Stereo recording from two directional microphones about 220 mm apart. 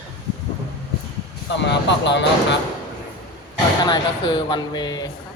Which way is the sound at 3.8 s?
20° left (ahead or behind).